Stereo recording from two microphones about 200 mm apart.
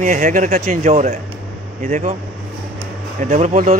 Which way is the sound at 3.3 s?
35° right (ahead or behind).